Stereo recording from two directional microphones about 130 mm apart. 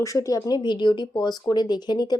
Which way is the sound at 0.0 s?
25° left (ahead or behind).